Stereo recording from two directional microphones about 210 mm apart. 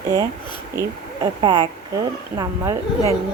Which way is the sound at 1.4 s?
20° right (ahead or behind).